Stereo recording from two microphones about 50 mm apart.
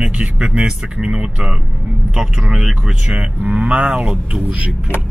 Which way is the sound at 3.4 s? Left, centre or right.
Right.